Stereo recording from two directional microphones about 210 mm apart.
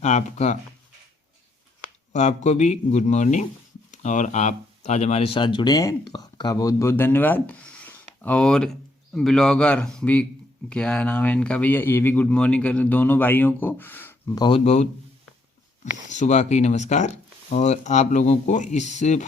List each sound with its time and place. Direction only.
0.0 s speech: 35° left (ahead or behind)
2.1 s speech: 35° left (ahead or behind)
16.0 s speech: 35° left (ahead or behind)